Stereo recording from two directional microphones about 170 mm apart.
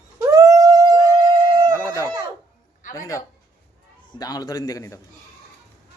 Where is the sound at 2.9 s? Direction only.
20° left (ahead or behind).